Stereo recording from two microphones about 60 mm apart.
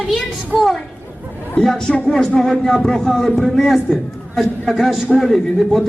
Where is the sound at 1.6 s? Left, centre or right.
Centre.